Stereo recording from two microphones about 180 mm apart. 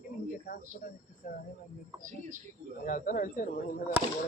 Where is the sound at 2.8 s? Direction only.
50° left (ahead or behind).